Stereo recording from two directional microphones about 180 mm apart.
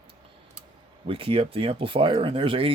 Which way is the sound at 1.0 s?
30° right (ahead or behind).